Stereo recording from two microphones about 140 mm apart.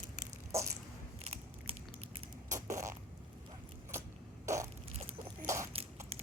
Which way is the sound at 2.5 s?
20° right (ahead or behind).